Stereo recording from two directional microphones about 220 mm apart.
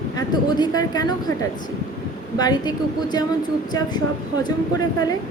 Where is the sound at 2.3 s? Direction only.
20° left (ahead or behind).